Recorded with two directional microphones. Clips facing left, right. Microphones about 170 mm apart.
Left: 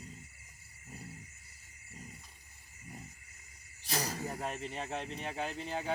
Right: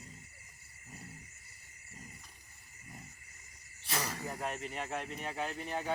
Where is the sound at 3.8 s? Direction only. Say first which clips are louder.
Left 1 dB; 35° left (ahead or behind).